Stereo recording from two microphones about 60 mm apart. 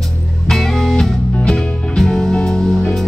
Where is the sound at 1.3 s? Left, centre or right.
Centre.